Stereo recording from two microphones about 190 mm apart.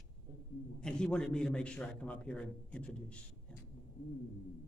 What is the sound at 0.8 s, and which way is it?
A man's voice, 5° left (ahead or behind).